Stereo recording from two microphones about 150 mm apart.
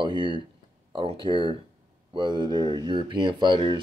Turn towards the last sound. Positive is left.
turn(degrees=-35)  # may be behind; listen again after turning